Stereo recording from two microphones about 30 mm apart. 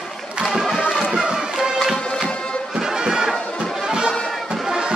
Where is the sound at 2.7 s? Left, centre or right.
Centre.